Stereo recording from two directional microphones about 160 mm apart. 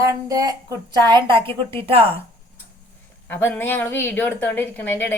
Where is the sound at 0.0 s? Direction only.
20° right (ahead or behind).